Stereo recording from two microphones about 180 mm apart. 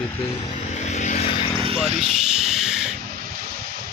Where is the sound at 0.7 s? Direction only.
40° left (ahead or behind).